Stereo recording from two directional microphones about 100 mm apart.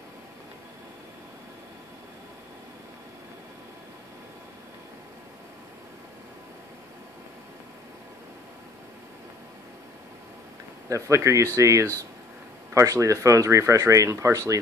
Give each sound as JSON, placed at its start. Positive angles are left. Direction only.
{"t": 10.9, "sound": "speech", "side_deg": -30}